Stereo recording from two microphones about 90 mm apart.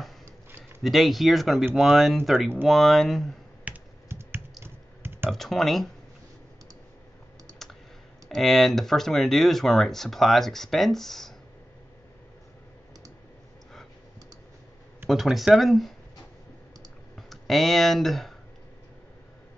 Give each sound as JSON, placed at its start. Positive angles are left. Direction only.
{"t": 0.2, "sound": "a sound", "side_deg": -25}
{"t": 0.8, "sound": "speech", "side_deg": 0}
{"t": 3.7, "sound": "computer keyboard", "side_deg": -15}
{"t": 4.1, "sound": "computer keyboard", "side_deg": -25}
{"t": 5.3, "sound": "speech", "side_deg": 5}
{"t": 8.3, "sound": "speech", "side_deg": 0}
{"t": 15.0, "sound": "speech", "side_deg": 0}
{"t": 17.1, "sound": "speech", "side_deg": 0}